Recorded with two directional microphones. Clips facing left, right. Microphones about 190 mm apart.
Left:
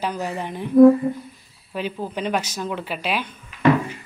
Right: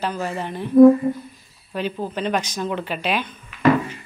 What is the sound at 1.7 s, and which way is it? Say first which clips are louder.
A woman's voice: right 1 dB; 5° left (ahead or behind).